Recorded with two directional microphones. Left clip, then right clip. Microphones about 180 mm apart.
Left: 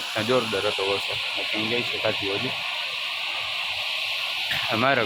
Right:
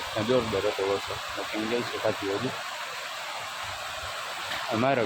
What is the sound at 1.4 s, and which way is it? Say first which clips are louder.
Speech: left 2 dB; centre (ahead or behind).